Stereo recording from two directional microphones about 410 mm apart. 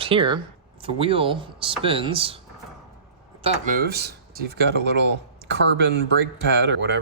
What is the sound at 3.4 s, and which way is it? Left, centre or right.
Speech, centre.